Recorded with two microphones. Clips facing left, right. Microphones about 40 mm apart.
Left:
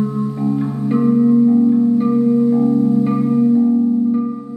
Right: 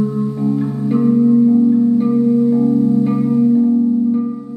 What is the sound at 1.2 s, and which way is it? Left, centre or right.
Music, left.